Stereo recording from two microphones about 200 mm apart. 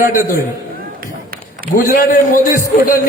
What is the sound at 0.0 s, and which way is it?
Speech, 40° left (ahead or behind).